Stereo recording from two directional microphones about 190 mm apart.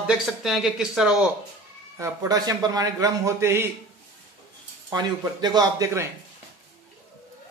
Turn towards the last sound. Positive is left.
turn(degrees=-15)  # may be behind; listen again after turning